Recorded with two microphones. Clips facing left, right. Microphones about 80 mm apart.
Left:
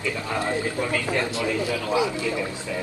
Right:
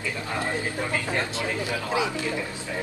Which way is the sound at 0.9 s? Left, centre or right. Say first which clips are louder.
Left 3 dB; right.